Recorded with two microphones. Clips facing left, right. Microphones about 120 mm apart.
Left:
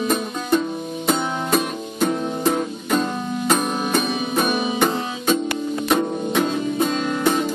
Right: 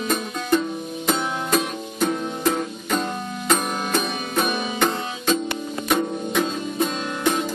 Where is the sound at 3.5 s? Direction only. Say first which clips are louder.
Left 1 dB; 5° left (ahead or behind).